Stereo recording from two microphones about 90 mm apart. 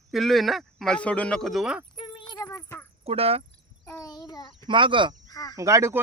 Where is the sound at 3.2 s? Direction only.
90° right.